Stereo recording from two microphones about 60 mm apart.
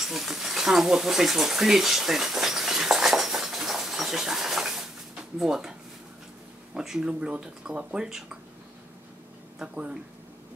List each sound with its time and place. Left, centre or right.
0.0 s a sound: centre
5.4 s speech: centre
9.6 s speech: centre